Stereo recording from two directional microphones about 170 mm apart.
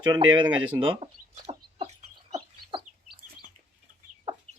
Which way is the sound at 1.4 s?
40° right (ahead or behind).